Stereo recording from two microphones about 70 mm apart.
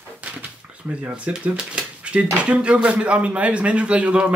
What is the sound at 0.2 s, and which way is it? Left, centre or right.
Speech, centre.